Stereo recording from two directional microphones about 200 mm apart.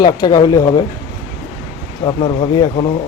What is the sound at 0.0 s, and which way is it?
Speech, 20° left (ahead or behind).